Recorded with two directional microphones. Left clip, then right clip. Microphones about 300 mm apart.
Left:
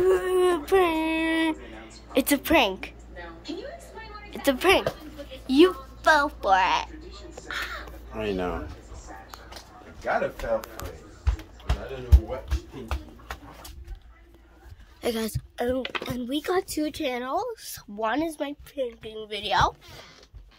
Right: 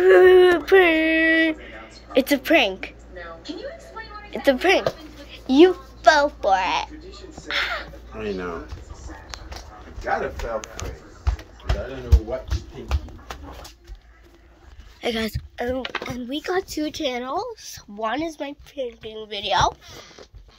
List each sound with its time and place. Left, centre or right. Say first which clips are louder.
0.0 s a sound: right 10 dB; centre
4.3 s a woman's voice: right 3 dB; centre
7.4 s a sound: right 8 dB; centre
8.2 s speech: even; left
15.0 s a woman's voice: right 3 dB; centre
16.5 s speech: right 2 dB; centre